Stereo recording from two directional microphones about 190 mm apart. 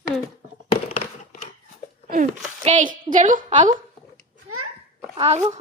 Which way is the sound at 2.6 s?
45° right (ahead or behind).